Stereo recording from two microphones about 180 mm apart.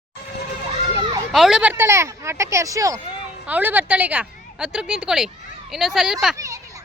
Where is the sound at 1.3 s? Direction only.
Centre (ahead or behind).